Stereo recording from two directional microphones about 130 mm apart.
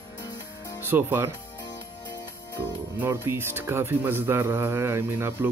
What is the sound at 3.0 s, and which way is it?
Speech, 20° right (ahead or behind).